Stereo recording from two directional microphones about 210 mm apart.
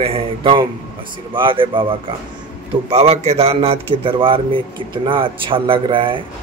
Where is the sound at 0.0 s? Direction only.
25° right (ahead or behind).